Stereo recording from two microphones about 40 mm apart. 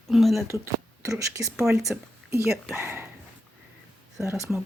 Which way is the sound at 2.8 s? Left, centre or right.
Right.